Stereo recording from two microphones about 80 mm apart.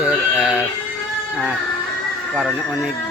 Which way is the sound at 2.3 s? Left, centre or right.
Centre.